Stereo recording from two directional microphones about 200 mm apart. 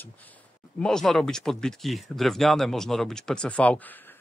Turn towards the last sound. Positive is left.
turn(degrees=10)  # may be behind; listen again after turning